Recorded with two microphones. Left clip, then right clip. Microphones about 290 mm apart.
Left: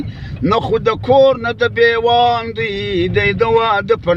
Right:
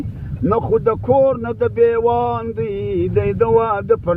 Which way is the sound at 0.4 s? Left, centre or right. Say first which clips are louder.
Left 2 dB; centre.